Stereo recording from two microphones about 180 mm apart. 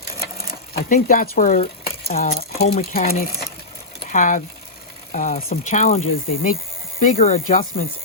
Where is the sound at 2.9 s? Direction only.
55° left (ahead or behind).